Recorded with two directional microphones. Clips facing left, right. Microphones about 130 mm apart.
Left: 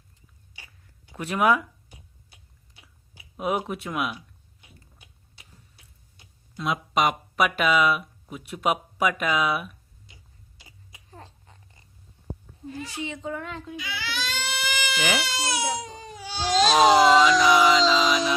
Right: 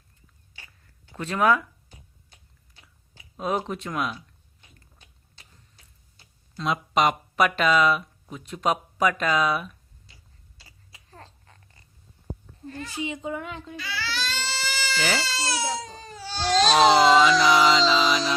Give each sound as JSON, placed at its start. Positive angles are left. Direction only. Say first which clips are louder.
{"t": 0.5, "sound": "a sound", "louder": "even", "side_deg": 15}
{"t": 4.6, "sound": "tick-tock", "louder": "left 2 dB", "side_deg": 10}
{"t": 6.6, "sound": "speech", "louder": "right 1 dB", "side_deg": 0}
{"t": 10.1, "sound": "tick-tock", "louder": "left 2 dB", "side_deg": 20}
{"t": 10.6, "sound": "babbling", "louder": "left 2 dB", "side_deg": 15}
{"t": 12.6, "sound": "speech", "louder": "left 1 dB", "side_deg": 5}
{"t": 13.0, "sound": "a child's voice", "louder": "right 3 dB", "side_deg": -10}
{"t": 13.7, "sound": "speech", "louder": "right 2 dB", "side_deg": 15}